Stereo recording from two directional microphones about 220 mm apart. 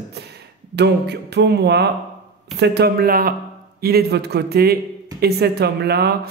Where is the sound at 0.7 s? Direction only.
50° right (ahead or behind).